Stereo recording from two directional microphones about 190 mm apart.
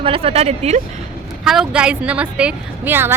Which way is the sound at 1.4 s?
Centre (ahead or behind).